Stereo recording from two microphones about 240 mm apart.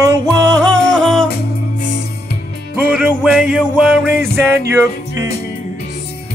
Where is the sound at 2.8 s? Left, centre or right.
Centre.